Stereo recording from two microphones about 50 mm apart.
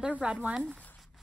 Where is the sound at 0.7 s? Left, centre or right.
Left.